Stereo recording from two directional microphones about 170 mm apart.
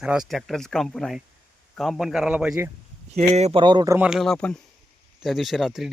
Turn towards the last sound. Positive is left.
turn(degrees=0)  # may be behind; listen again after turning